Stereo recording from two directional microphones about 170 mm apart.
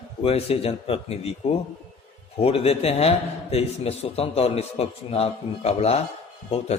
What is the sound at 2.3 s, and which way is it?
A man's voice, 35° left (ahead or behind).